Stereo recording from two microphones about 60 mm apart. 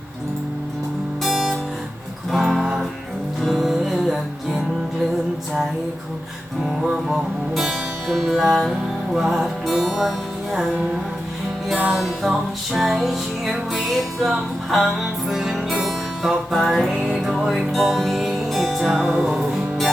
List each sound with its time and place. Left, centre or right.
1.2 s guitar: centre
2.3 s music: centre
6.6 s music: centre
11.9 s music: centre